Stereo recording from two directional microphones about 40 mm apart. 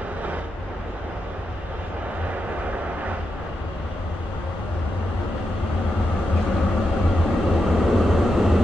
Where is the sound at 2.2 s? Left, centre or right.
Right.